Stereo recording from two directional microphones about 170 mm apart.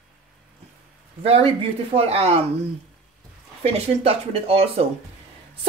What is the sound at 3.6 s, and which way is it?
A woman's voice, 40° right (ahead or behind).